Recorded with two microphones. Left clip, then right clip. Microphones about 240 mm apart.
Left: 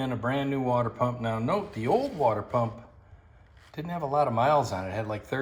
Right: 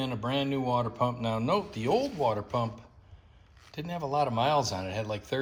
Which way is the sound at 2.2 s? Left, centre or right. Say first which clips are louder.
Left 5 dB; right.